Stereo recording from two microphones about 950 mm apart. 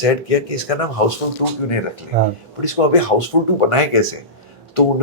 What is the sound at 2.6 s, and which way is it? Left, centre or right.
Speech, left.